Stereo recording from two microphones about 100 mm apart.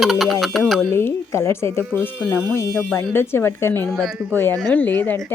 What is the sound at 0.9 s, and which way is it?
Speech, 25° left (ahead or behind).